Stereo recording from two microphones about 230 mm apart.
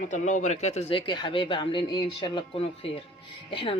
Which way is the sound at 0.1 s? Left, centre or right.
Left.